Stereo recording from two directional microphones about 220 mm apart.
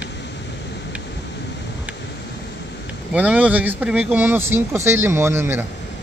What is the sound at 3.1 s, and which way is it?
Speech, 5° right (ahead or behind).